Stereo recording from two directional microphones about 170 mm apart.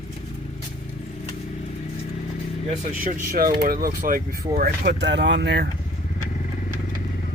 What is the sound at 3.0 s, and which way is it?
Speech, 55° right (ahead or behind).